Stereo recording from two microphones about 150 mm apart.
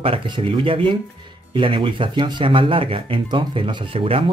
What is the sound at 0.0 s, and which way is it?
Speech, 35° right (ahead or behind).